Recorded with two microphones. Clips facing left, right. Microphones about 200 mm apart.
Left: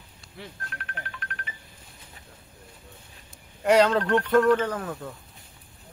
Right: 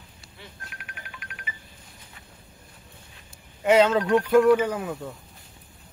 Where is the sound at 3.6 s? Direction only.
5° right (ahead or behind).